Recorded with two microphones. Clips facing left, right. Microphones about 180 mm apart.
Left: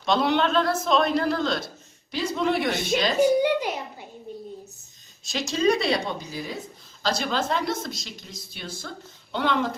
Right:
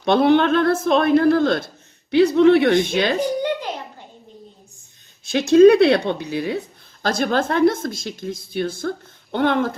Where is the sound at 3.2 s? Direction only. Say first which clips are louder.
Left 2 dB; 10° left (ahead or behind).